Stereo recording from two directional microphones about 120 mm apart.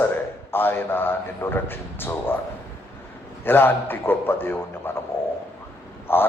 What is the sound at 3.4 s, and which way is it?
A man's voice, 15° left (ahead or behind).